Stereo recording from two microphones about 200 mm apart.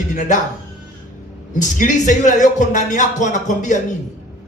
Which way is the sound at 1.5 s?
40° left (ahead or behind).